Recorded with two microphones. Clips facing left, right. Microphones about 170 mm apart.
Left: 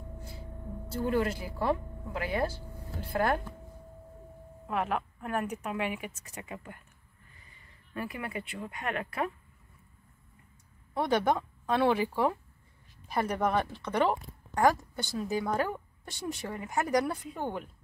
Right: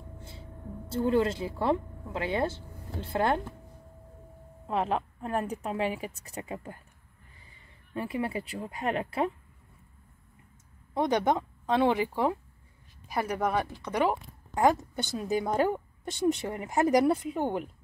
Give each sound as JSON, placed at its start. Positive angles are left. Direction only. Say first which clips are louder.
{"t": 0.8, "sound": "a woman's voice", "louder": "right 4 dB", "side_deg": -25}
{"t": 4.6, "sound": "a woman's voice", "louder": "right 3 dB", "side_deg": -30}
{"t": 7.9, "sound": "a woman's voice", "louder": "right 5 dB", "side_deg": -25}
{"t": 11.0, "sound": "a woman's voice", "louder": "right 1 dB", "side_deg": -20}